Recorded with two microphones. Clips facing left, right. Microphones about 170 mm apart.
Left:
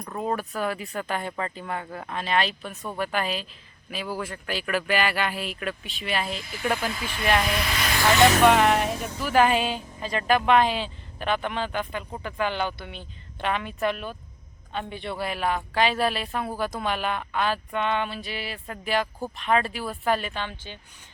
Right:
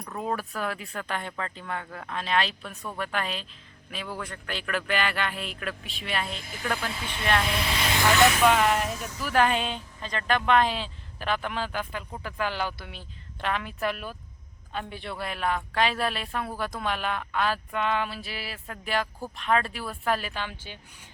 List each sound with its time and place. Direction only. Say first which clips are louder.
0.2 s a woman's voice: left 3 dB; centre (ahead or behind)
6.4 s speech: left 4 dB; 45° right (ahead or behind)
7.4 s speech: left 1 dB; 25° right (ahead or behind)
8.4 s a woman's voice: left 3 dB; centre (ahead or behind)
8.8 s speech: left 4 dB; 60° left (ahead or behind)
9.2 s a woman's voice: left 3 dB; 5° left (ahead or behind)